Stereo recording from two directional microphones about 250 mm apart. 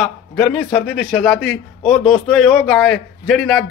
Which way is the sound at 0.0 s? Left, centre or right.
Centre.